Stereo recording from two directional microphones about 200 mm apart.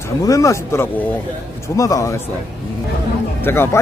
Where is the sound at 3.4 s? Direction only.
10° left (ahead or behind).